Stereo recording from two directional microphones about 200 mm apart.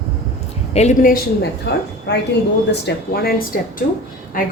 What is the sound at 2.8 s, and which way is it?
Speech, 50° left (ahead or behind).